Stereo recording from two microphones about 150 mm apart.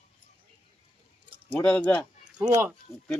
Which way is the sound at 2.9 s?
20° left (ahead or behind).